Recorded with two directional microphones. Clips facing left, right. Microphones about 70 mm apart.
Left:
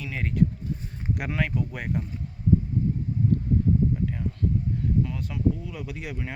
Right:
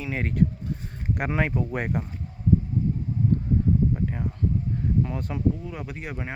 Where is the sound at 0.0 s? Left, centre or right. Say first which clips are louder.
Right 1 dB; right.